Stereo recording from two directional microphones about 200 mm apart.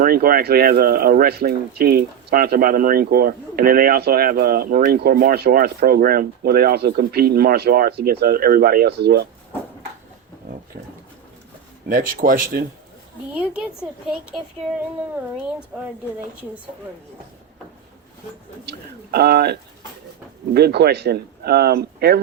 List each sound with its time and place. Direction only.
0.0 s speech: 50° right (ahead or behind)
11.9 s speech: 45° right (ahead or behind)
13.3 s a woman's voice: 5° right (ahead or behind)
18.6 s speech: 55° right (ahead or behind)